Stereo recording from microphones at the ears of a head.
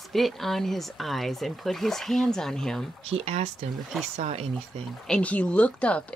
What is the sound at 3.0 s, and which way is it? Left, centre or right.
Speech, right.